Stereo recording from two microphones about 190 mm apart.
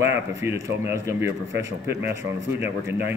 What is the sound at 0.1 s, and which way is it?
Speech, 15° right (ahead or behind).